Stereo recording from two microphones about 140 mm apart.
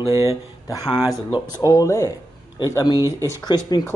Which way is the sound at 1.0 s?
20° right (ahead or behind).